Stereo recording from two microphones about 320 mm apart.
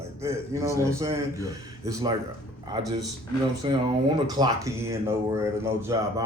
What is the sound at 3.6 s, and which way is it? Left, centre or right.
Speech, centre.